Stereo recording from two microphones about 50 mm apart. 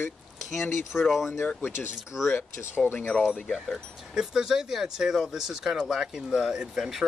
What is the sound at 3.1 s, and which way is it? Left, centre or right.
Speech, centre.